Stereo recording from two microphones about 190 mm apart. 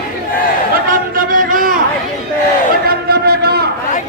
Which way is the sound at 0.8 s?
45° right (ahead or behind).